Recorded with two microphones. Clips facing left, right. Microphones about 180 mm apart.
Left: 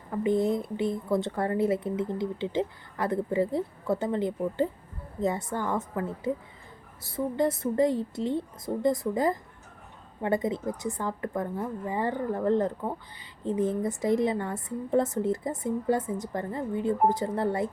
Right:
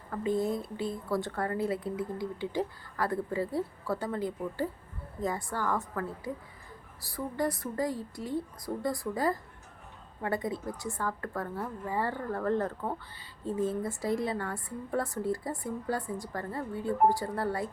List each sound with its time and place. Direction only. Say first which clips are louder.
0.1 s a woman's voice: left 5 dB; 20° left (ahead or behind)